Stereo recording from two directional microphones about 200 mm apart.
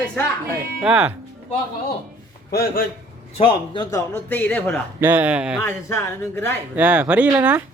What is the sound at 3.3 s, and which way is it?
Speech, 25° left (ahead or behind).